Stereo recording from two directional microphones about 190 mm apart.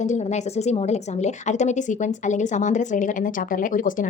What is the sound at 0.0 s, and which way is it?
A woman's voice, 35° left (ahead or behind).